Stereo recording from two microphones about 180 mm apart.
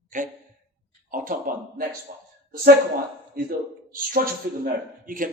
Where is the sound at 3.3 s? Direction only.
50° right (ahead or behind).